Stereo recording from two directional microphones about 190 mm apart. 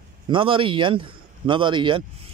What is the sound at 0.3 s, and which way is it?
A man's voice, 25° right (ahead or behind).